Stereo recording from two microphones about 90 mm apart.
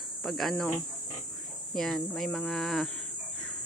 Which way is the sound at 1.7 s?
5° left (ahead or behind).